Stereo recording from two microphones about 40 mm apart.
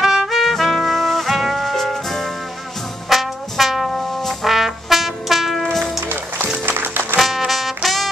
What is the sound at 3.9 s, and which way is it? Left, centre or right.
Brass instrument, centre.